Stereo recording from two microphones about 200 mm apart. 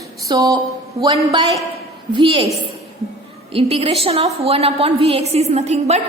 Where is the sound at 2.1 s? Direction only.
25° right (ahead or behind).